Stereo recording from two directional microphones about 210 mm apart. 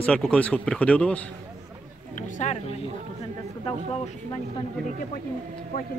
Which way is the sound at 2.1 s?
35° left (ahead or behind).